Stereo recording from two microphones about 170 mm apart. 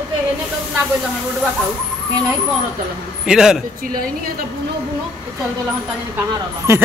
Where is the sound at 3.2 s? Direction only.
5° right (ahead or behind).